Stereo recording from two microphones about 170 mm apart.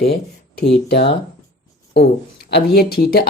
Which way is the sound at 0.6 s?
80° left.